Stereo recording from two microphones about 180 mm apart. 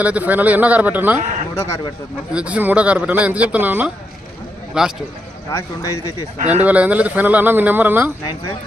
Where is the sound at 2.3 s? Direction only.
5° right (ahead or behind).